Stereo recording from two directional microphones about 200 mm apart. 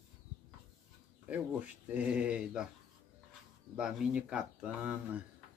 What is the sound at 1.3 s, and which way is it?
Speech, 5° right (ahead or behind).